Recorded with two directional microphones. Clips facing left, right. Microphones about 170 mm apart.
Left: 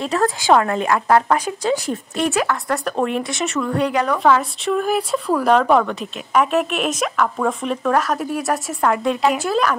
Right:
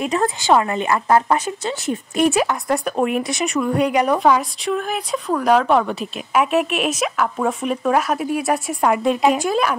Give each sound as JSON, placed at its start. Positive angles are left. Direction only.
{"t": 0.0, "sound": "speech", "side_deg": -10}
{"t": 2.1, "sound": "a woman's voice", "side_deg": -15}
{"t": 4.6, "sound": "a woman's voice", "side_deg": 5}